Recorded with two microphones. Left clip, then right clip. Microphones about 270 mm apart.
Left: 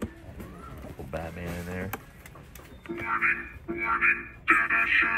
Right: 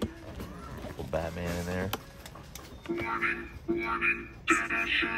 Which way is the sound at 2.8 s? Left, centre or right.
Centre.